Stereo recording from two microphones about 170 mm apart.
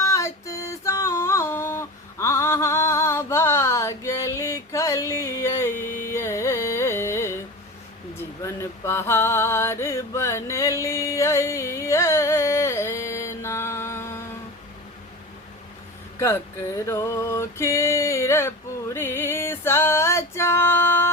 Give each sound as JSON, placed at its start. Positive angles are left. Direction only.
{"t": 0.0, "sound": "music", "side_deg": 15}
{"t": 8.4, "sound": "a sound", "side_deg": 15}
{"t": 16.1, "sound": "music", "side_deg": 15}